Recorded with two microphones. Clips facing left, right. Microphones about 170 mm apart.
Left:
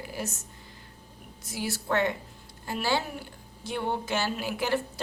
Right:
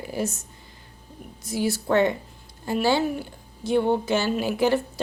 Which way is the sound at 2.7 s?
20° right (ahead or behind).